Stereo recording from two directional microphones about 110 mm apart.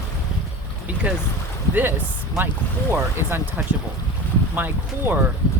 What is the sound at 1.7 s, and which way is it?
Speech, 20° right (ahead or behind).